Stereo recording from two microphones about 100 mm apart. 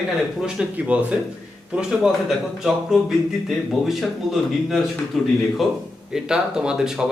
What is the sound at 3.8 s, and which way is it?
Speech, centre (ahead or behind).